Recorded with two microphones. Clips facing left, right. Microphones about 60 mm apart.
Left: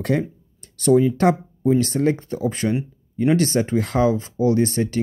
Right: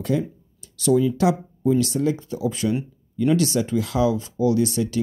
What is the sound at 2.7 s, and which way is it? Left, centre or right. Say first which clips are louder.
Speech: left 1 dB; left.